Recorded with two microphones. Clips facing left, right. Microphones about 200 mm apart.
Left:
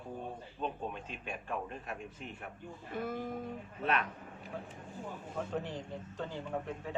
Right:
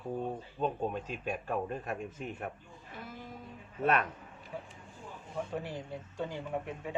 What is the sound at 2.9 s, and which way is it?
Speech, 55° left (ahead or behind).